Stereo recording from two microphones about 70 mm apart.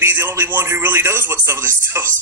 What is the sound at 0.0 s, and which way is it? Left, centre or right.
Speech, right.